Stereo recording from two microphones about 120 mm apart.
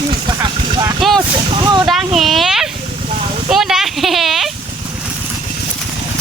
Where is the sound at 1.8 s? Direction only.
5° right (ahead or behind).